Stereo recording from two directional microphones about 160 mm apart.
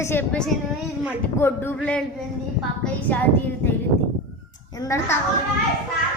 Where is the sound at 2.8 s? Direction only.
10° left (ahead or behind).